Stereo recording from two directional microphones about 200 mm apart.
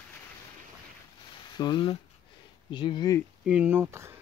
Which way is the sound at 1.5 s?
20° left (ahead or behind).